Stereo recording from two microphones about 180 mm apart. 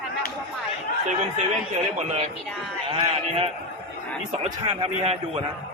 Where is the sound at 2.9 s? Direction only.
30° right (ahead or behind).